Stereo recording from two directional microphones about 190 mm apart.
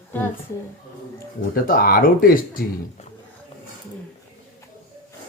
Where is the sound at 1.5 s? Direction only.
50° left (ahead or behind).